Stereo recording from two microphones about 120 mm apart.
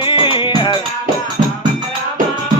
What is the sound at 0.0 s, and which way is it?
Music, 45° left (ahead or behind).